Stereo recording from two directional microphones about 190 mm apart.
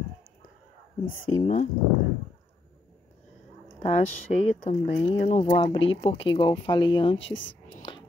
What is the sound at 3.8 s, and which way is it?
Speech, 35° left (ahead or behind).